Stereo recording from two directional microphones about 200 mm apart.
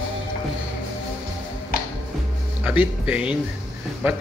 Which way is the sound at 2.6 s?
5° right (ahead or behind).